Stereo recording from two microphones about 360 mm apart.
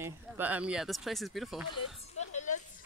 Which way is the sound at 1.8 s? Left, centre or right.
Centre.